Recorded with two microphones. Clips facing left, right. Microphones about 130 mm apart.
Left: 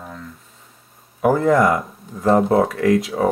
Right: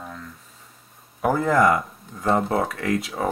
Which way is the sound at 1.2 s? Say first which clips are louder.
Left 4 dB; centre (ahead or behind).